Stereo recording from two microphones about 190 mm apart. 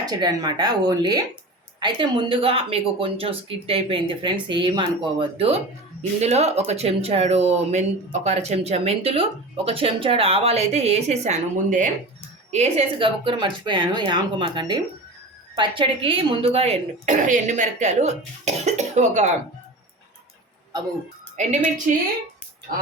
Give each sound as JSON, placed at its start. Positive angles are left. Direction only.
{"t": 0.0, "sound": "speech", "side_deg": -20}
{"t": 21.4, "sound": "speech", "side_deg": -40}